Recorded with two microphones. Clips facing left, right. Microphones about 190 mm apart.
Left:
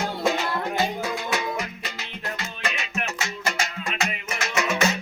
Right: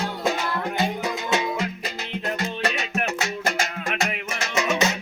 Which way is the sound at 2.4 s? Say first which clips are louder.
Right 5 dB; 65° right (ahead or behind).